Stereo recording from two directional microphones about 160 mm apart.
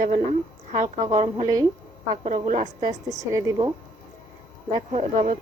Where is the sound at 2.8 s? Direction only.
20° right (ahead or behind).